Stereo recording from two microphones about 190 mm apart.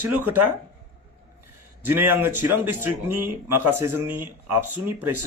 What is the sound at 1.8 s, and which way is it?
Speech, 10° right (ahead or behind).